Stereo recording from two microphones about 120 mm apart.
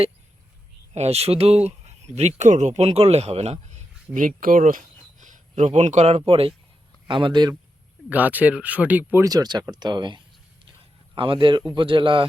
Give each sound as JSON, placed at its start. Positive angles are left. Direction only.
{"t": 0.9, "sound": "speech", "side_deg": -60}
{"t": 1.6, "sound": "a sound", "side_deg": -65}
{"t": 2.1, "sound": "speech", "side_deg": -75}
{"t": 7.1, "sound": "speech", "side_deg": -45}
{"t": 8.1, "sound": "speech", "side_deg": -15}
{"t": 9.2, "sound": "speech", "side_deg": -35}